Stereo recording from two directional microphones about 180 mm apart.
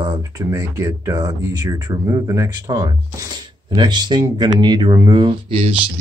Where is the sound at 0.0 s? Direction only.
25° right (ahead or behind).